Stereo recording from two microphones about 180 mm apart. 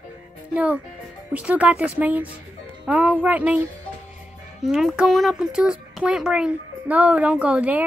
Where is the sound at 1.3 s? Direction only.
5° right (ahead or behind).